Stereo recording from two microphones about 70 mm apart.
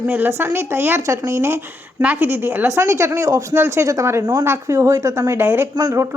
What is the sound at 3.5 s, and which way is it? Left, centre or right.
Speech, right.